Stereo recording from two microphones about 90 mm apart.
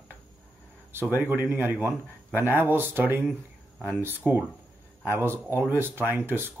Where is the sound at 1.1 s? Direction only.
25° right (ahead or behind).